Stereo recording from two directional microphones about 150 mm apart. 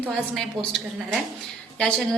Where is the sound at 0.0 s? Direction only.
5° left (ahead or behind).